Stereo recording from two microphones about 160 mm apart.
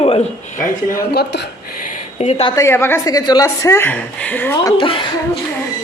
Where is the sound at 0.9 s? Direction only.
85° left.